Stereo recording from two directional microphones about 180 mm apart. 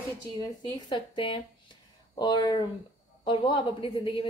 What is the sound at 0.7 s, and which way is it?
A woman's voice, 25° left (ahead or behind).